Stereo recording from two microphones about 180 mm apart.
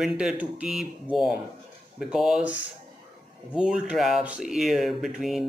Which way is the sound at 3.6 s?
5° right (ahead or behind).